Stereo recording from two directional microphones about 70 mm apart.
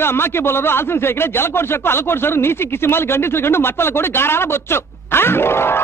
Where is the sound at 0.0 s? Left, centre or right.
Left.